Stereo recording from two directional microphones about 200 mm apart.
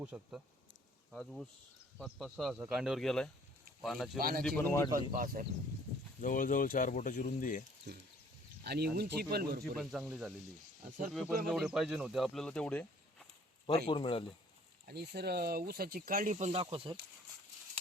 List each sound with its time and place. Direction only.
0.0 s speech: 5° right (ahead or behind)
4.2 s speech: 50° right (ahead or behind)
4.4 s speech: 10° left (ahead or behind)
4.9 s speech: 45° right (ahead or behind)
6.2 s speech: 40° left (ahead or behind)
7.9 s speech: 55° right (ahead or behind)
9.7 s speech: centre (ahead or behind)
11.4 s speech: centre (ahead or behind)
13.8 s speech: 25° left (ahead or behind)
14.8 s speech: 50° right (ahead or behind); by 17.0 s 25° right (ahead or behind)